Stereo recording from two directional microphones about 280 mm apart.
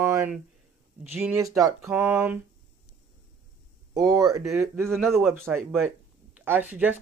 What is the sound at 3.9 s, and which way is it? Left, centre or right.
Speech, centre.